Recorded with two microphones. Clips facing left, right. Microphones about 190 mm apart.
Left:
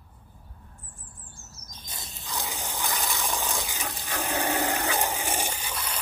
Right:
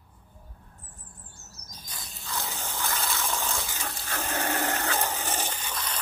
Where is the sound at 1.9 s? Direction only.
20° left (ahead or behind).